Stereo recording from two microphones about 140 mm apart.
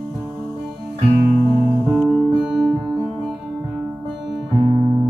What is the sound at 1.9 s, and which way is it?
Music, 5° right (ahead or behind).